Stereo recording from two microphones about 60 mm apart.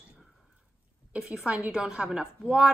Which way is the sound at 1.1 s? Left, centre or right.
Centre.